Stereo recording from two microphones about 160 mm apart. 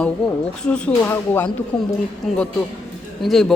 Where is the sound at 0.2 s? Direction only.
Centre (ahead or behind).